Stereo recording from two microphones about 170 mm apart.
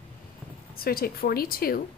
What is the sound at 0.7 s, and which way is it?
Speech, 60° left (ahead or behind).